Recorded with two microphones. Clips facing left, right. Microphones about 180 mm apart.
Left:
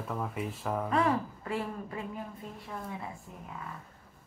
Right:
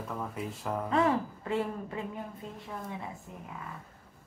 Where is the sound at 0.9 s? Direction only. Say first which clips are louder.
Right 2 dB; 25° right (ahead or behind).